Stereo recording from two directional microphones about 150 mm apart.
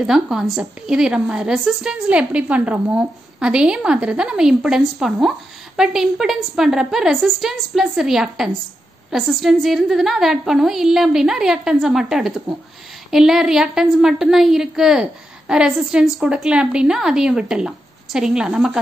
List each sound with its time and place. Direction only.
0.0 s a woman's voice: 5° right (ahead or behind)